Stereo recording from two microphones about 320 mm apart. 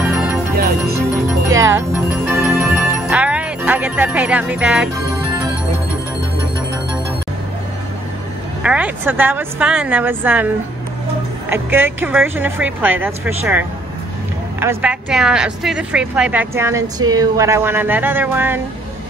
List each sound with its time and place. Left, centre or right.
0.6 s music: right
1.5 s speech: centre
8.6 s a woman's voice: centre